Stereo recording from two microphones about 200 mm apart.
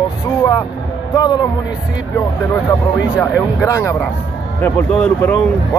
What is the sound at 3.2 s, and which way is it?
Speech, 15° left (ahead or behind).